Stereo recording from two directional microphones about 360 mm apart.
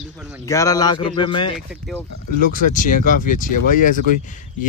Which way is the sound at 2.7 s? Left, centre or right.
Left.